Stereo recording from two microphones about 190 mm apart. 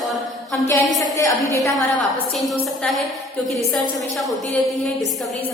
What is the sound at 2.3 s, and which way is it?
Speech, centre (ahead or behind).